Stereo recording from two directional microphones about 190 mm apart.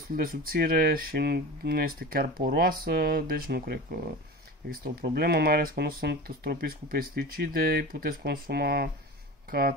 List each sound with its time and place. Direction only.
0.1 s speech: 50° right (ahead or behind)